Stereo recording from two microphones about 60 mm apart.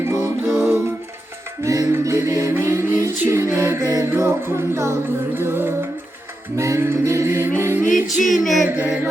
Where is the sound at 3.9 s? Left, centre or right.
Right.